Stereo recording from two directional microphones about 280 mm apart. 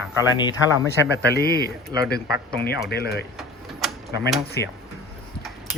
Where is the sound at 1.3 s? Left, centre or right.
Left.